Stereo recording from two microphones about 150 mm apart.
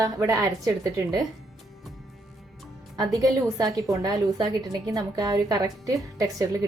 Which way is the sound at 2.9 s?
25° right (ahead or behind).